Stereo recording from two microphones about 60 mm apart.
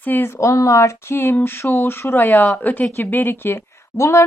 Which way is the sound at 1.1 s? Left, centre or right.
Left.